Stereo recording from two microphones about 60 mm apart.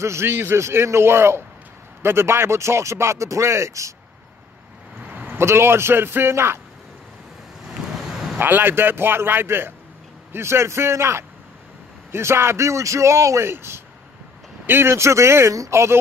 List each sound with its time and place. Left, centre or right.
0.0 s speech: right
5.4 s speech: right
7.6 s vehicle: centre
8.4 s a man's voice: right
13.5 s speech: right